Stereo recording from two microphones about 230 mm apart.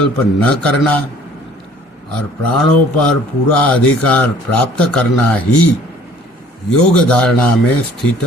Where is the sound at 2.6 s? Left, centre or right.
Centre.